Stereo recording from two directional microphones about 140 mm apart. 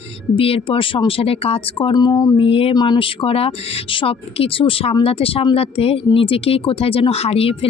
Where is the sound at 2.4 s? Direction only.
40° left (ahead or behind).